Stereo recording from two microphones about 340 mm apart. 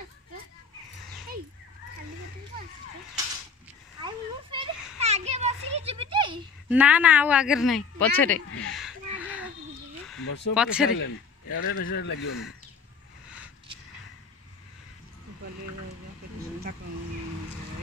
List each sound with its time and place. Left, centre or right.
4.0 s children playing: centre
6.7 s speech: centre
8.6 s a sound: centre
10.1 s a sound: left
10.5 s speech: centre
10.9 s a man's voice: left